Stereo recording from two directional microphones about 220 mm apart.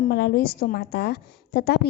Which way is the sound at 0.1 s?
45° left (ahead or behind).